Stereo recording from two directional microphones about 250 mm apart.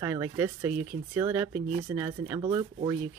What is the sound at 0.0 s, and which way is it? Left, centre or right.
Speech, centre.